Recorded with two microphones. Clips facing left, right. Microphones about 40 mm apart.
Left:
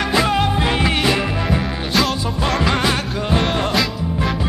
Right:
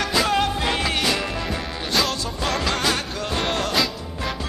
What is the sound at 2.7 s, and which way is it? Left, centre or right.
Music, centre.